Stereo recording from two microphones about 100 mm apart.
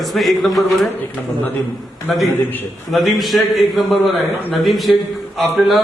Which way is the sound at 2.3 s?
20° left (ahead or behind).